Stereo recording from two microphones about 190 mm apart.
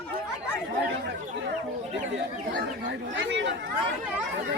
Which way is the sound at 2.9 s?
75° right (ahead or behind).